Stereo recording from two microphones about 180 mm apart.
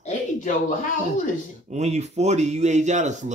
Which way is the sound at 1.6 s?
40° right (ahead or behind).